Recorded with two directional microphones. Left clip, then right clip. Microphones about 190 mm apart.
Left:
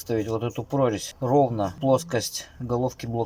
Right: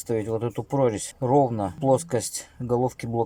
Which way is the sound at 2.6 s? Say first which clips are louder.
Right 3 dB; 20° right (ahead or behind).